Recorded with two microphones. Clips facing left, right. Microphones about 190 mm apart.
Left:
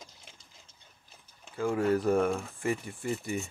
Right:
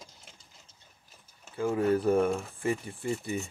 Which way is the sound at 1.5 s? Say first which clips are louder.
Right 1 dB; 20° right (ahead or behind).